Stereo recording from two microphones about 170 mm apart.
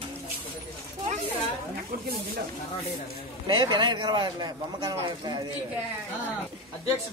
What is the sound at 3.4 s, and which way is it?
A man's voice, 25° right (ahead or behind).